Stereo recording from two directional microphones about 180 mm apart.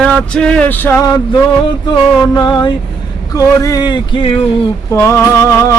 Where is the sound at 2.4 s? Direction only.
25° left (ahead or behind).